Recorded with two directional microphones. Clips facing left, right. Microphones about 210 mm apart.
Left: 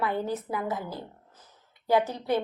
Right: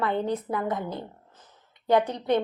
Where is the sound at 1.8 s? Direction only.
5° left (ahead or behind).